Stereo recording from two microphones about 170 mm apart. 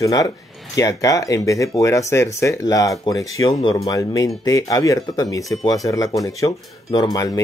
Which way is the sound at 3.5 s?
35° left (ahead or behind).